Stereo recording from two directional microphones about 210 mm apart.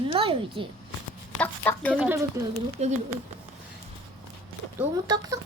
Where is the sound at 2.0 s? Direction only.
15° right (ahead or behind).